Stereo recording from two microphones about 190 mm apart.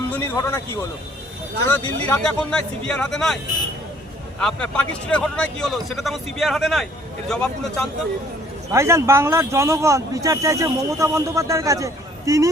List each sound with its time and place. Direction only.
0.1 s speech: 15° left (ahead or behind)
4.4 s speech: 5° left (ahead or behind)
8.7 s speech: 15° right (ahead or behind)